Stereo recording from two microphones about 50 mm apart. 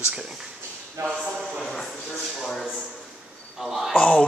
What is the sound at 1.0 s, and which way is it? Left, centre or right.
Speech, right.